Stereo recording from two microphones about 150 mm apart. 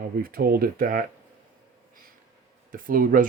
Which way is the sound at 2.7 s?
70° right (ahead or behind).